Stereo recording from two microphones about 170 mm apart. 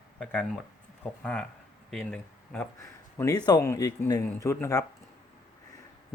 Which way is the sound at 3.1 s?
20° left (ahead or behind).